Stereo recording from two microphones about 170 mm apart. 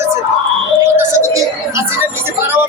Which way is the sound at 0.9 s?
15° right (ahead or behind).